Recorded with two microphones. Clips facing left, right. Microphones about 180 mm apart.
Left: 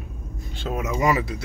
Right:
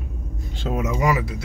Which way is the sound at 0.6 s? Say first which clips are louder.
Right 3 dB; 20° right (ahead or behind).